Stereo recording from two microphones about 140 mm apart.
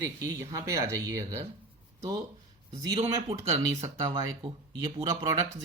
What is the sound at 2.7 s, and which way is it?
Speech, 25° right (ahead or behind).